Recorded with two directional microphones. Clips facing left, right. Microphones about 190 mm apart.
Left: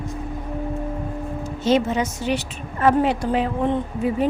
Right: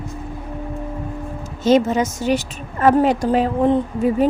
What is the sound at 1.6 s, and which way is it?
A woman's voice, 45° right (ahead or behind).